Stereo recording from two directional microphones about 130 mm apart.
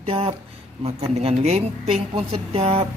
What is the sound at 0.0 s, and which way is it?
A woman's voice, 45° right (ahead or behind).